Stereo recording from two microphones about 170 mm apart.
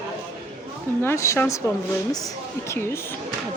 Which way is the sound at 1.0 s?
15° left (ahead or behind).